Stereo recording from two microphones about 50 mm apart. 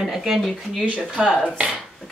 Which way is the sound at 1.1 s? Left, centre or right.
Centre.